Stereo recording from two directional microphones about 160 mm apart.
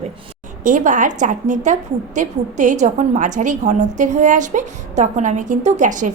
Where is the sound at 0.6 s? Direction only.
55° right (ahead or behind).